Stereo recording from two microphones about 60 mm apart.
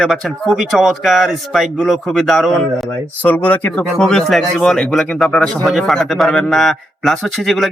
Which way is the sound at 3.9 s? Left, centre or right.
Centre.